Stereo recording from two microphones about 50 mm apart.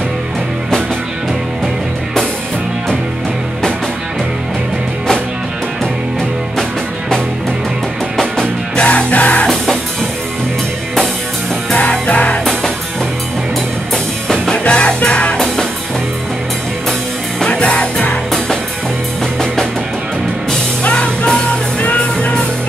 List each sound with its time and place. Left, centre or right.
8.7 s music: left
11.7 s music: left
14.3 s music: centre
14.6 s music: left
17.5 s music: left
20.8 s music: left